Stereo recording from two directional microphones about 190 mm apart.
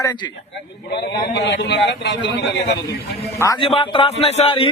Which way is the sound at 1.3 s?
65° left (ahead or behind).